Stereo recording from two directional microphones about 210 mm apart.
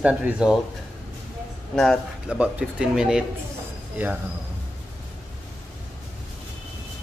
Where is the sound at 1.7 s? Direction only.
5° left (ahead or behind).